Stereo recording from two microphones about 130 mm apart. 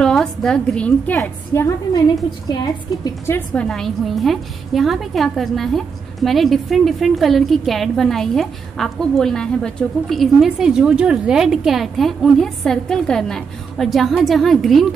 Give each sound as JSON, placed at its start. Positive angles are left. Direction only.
{"t": 0.0, "sound": "a woman's voice", "side_deg": 5}
{"t": 3.3, "sound": "a woman's voice", "side_deg": 15}
{"t": 3.6, "sound": "a woman's voice", "side_deg": 5}